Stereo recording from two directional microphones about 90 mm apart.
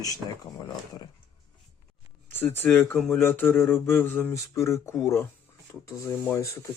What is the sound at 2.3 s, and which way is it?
Speech, 25° left (ahead or behind).